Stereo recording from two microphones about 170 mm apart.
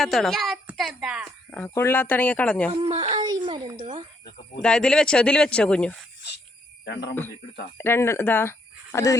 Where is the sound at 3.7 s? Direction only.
40° right (ahead or behind).